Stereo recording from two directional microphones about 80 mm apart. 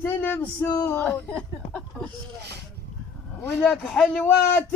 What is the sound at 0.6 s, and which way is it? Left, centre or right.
Speech, left.